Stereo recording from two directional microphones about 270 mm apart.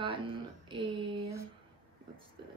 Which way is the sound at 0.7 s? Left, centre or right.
Centre.